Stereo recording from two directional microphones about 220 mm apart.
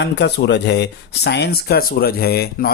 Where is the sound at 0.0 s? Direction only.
50° left (ahead or behind).